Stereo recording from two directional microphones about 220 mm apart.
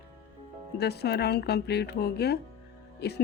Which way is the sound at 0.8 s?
50° left (ahead or behind).